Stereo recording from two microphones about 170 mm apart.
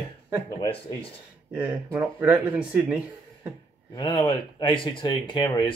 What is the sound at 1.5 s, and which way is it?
Speech, 10° right (ahead or behind).